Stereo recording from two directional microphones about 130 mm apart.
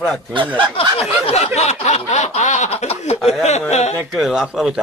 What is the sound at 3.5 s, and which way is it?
Speech, 60° left (ahead or behind).